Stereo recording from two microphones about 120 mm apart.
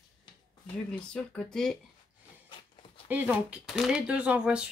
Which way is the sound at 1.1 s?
5° left (ahead or behind).